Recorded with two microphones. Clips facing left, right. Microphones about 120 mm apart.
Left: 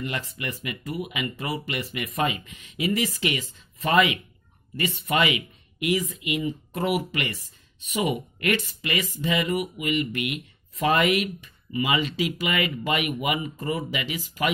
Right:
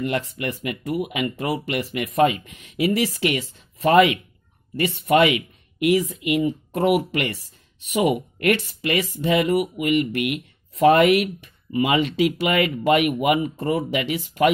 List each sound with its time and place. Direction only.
0.0 s speech: 60° right (ahead or behind)